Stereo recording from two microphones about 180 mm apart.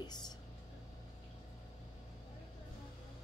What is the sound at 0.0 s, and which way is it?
Music, 25° left (ahead or behind).